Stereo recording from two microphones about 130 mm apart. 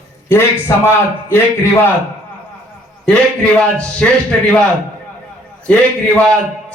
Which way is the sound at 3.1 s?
10° left (ahead or behind).